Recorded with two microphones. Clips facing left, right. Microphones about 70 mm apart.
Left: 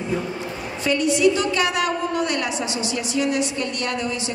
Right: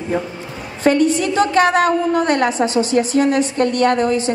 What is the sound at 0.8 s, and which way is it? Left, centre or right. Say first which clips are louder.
A woman's voice: right 4 dB; right.